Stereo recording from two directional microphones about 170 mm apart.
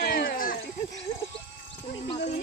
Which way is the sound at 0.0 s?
60° left (ahead or behind).